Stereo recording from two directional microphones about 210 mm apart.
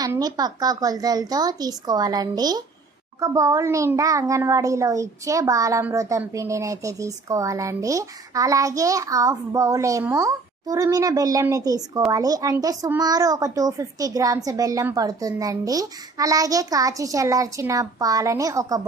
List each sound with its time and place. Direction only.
0.0 s a child's voice: 20° right (ahead or behind)